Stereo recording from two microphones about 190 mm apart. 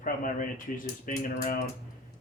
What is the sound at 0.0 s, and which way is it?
Speech, 45° left (ahead or behind).